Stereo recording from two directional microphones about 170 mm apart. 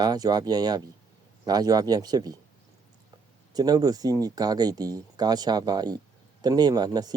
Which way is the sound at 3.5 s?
25° right (ahead or behind).